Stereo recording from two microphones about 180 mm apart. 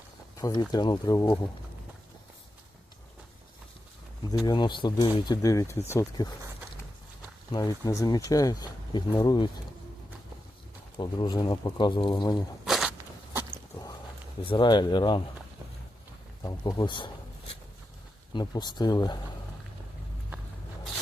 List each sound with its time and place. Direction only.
0.3 s speech: 20° left (ahead or behind)
4.4 s speech: 25° left (ahead or behind)
7.5 s speech: 20° left (ahead or behind)
10.9 s speech: 25° left (ahead or behind)
12.6 s a sound: centre (ahead or behind)
14.4 s speech: 25° left (ahead or behind)
16.4 s speech: 20° left (ahead or behind)
18.3 s speech: 25° left (ahead or behind)